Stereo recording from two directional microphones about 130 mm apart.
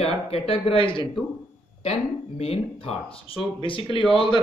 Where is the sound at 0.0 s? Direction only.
50° left (ahead or behind).